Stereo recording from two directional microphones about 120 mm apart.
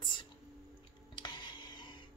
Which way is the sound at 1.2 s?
40° left (ahead or behind).